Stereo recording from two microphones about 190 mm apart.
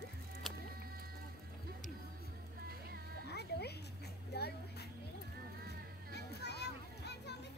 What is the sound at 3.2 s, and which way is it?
Cat, 60° left (ahead or behind).